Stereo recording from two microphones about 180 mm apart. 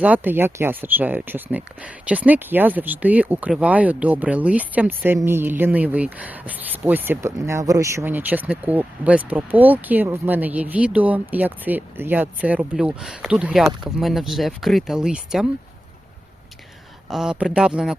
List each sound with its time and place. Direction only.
0.0 s speech: 10° right (ahead or behind)
17.1 s speech: 5° right (ahead or behind)